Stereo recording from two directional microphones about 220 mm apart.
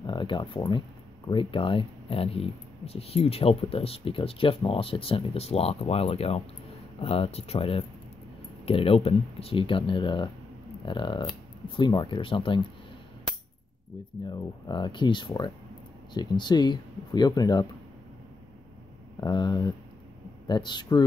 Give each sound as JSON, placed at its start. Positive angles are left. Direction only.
{"t": 0.0, "sound": "speech", "side_deg": 20}
{"t": 14.2, "sound": "speech", "side_deg": 20}
{"t": 19.1, "sound": "speech", "side_deg": 20}